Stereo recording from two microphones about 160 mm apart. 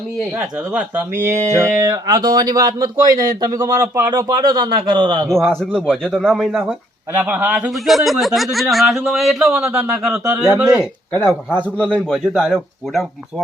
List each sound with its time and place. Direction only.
0.3 s speech: 10° right (ahead or behind)
4.5 s speech: 30° right (ahead or behind)
5.5 s a man's voice: 5° left (ahead or behind)
10.8 s a man's voice: 10° left (ahead or behind)